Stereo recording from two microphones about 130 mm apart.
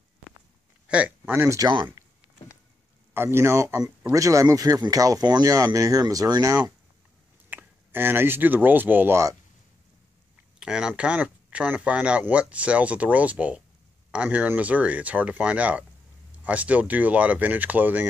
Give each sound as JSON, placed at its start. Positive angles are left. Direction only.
{"t": 0.8, "sound": "speech", "side_deg": -10}
{"t": 1.6, "sound": "speech", "side_deg": -35}
{"t": 3.2, "sound": "speech", "side_deg": -20}
{"t": 7.4, "sound": "speech", "side_deg": -15}
{"t": 10.6, "sound": "speech", "side_deg": -5}